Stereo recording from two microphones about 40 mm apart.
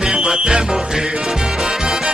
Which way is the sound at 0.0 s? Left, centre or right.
Right.